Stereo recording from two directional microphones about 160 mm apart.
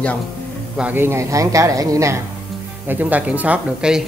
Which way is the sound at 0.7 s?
10° right (ahead or behind).